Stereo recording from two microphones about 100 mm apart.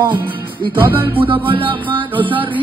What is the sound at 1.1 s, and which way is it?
Music, 60° right (ahead or behind).